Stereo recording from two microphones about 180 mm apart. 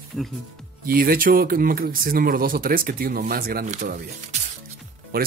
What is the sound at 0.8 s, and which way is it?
Speech, 55° right (ahead or behind).